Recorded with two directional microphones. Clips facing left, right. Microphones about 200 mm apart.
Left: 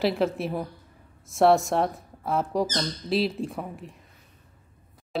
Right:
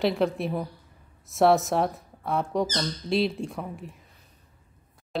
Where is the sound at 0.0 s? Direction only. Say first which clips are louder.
Even; centre (ahead or behind).